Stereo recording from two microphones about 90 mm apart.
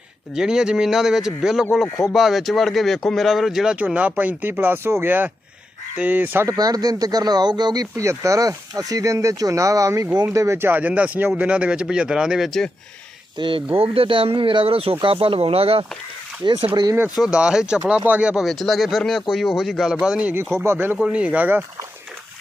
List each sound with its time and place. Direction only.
0.3 s speech: 5° right (ahead or behind)
3.8 s speech: 15° right (ahead or behind)
6.6 s speech: 45° right (ahead or behind)
7.9 s a man's voice: 35° right (ahead or behind); by 12.6 s 5° right (ahead or behind)
13.4 s speech: 55° right (ahead or behind)
13.7 s speech: 90° right
16.4 s speech: 75° right (ahead or behind)
17.2 s a man's voice: 10° right (ahead or behind)
18.4 s speech: centre (ahead or behind); by 21.0 s 25° right (ahead or behind)
21.0 s a man's voice: 15° right (ahead or behind)